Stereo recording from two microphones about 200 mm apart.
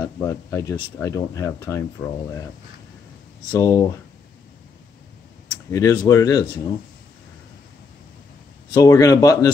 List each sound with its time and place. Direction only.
0.0 s speech: 15° left (ahead or behind)
3.5 s speech: 15° left (ahead or behind)
5.7 s speech: 15° left (ahead or behind)
8.7 s speech: 15° left (ahead or behind)